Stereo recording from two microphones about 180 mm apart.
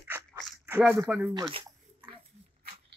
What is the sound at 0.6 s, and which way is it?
Speech, 10° right (ahead or behind).